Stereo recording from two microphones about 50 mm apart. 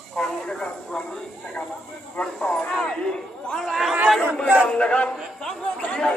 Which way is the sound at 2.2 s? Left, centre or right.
Centre.